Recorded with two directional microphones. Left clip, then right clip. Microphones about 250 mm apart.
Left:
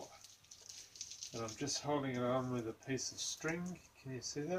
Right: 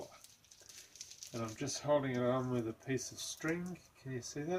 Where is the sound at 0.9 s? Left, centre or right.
Centre.